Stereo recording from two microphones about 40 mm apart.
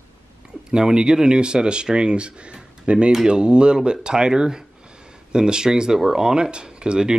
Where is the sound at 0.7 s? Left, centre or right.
Centre.